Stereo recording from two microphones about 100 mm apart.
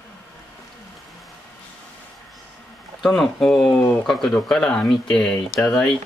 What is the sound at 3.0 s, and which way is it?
Speech, 5° left (ahead or behind).